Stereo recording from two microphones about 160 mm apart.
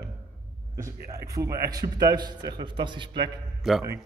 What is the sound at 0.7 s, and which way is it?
A man's voice, 20° right (ahead or behind).